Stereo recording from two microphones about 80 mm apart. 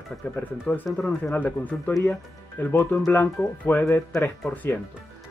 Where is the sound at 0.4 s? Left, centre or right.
Left.